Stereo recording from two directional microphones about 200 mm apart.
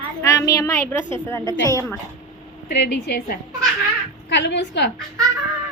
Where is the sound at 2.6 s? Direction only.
55° left (ahead or behind).